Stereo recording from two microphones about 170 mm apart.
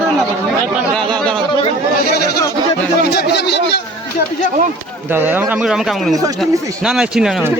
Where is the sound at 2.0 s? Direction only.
65° left (ahead or behind).